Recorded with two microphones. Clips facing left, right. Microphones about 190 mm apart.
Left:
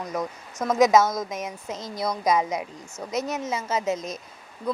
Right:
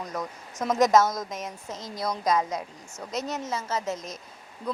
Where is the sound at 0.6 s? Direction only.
5° left (ahead or behind).